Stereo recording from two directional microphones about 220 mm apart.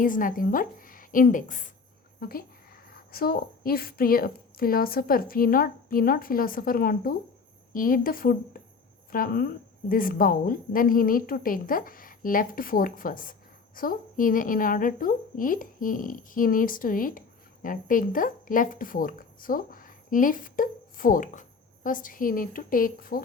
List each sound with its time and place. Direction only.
0.0 s a woman's voice: 35° left (ahead or behind)